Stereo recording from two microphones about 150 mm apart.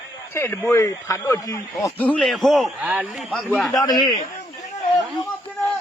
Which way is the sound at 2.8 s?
10° right (ahead or behind).